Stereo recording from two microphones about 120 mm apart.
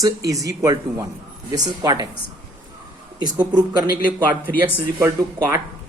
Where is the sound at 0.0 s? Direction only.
30° right (ahead or behind).